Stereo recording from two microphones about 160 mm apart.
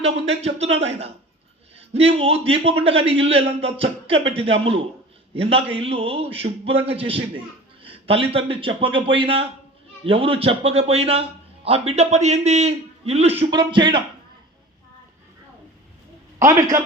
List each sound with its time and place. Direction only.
0.0 s a man's voice: 40° right (ahead or behind)
16.4 s speech: 20° right (ahead or behind)